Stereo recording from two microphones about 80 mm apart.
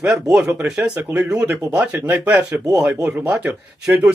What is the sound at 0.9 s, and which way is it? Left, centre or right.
Speech, centre.